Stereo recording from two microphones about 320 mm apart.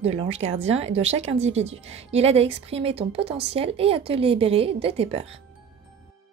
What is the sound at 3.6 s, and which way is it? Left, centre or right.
Speech, centre.